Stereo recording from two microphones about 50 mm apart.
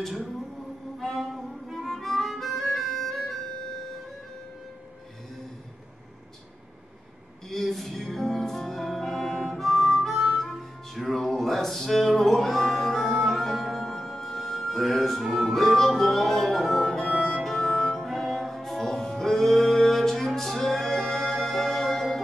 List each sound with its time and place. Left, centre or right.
0.9 s music: centre
2.0 s harmonica: centre
7.4 s music: centre